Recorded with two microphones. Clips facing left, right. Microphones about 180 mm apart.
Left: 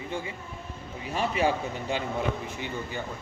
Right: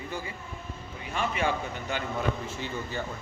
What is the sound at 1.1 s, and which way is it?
Speech, 35° left (ahead or behind).